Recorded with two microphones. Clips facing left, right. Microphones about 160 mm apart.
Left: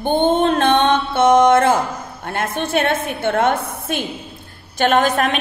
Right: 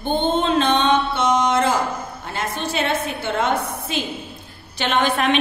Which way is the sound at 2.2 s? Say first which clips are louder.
Left 5 dB; 55° left (ahead or behind).